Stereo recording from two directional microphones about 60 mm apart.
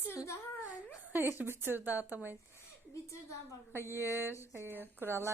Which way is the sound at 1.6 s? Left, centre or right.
Right.